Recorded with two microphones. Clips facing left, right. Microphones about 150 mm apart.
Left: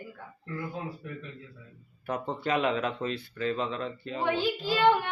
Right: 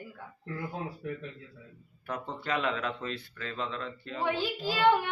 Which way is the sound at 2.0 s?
20° left (ahead or behind).